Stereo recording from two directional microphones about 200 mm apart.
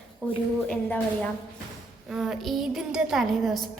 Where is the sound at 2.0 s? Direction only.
Centre (ahead or behind).